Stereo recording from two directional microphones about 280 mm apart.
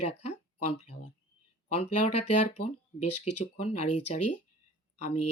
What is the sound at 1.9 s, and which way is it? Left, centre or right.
Speech, left.